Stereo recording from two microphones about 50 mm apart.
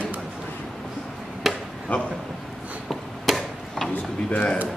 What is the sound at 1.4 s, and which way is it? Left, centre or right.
Chop, centre.